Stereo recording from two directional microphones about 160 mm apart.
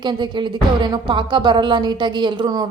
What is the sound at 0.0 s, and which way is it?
A woman's voice, 30° right (ahead or behind).